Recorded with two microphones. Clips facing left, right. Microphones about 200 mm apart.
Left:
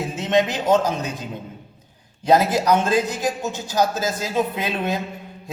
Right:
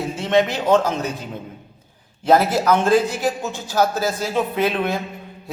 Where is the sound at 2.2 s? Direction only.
15° left (ahead or behind).